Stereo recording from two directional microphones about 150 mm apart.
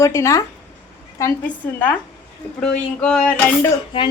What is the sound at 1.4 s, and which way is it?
A woman's voice, 10° left (ahead or behind).